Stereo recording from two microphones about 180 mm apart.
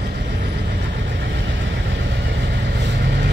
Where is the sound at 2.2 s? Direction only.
70° right (ahead or behind).